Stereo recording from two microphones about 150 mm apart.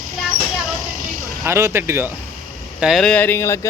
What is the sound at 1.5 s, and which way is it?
Speech, 20° right (ahead or behind).